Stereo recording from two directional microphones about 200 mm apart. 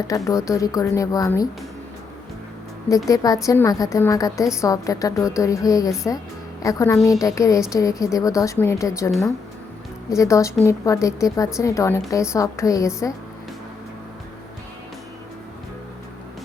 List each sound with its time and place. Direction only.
0.1 s a woman's voice: 15° left (ahead or behind)
2.9 s a woman's voice: 15° left (ahead or behind)